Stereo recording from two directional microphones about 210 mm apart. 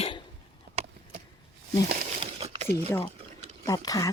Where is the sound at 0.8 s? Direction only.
30° right (ahead or behind).